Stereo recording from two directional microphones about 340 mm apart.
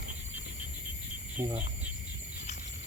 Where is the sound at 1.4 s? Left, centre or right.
Centre.